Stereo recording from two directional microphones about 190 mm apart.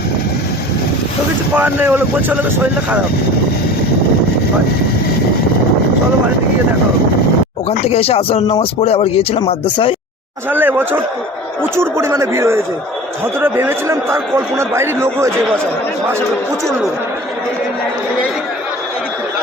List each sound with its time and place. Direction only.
1.5 s speech: 10° right (ahead or behind)
7.7 s speech: 35° left (ahead or behind)
10.5 s speech: 10° right (ahead or behind)